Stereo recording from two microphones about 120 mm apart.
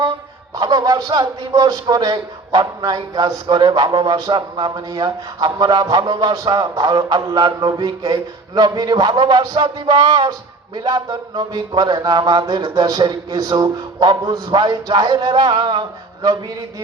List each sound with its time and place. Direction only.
0.5 s a man's voice: 35° right (ahead or behind)